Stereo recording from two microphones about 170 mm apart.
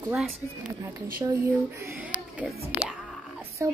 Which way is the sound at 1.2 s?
20° right (ahead or behind).